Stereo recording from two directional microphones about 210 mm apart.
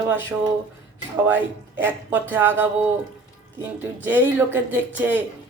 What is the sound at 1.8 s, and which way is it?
Speech, 10° right (ahead or behind).